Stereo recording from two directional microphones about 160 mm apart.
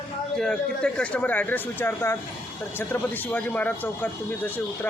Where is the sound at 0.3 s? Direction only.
5° left (ahead or behind).